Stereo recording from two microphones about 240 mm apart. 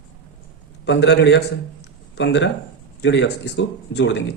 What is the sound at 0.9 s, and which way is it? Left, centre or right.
Speech, left.